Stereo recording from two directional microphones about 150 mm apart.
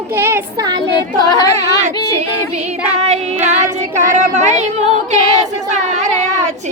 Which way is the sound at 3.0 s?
50° right (ahead or behind).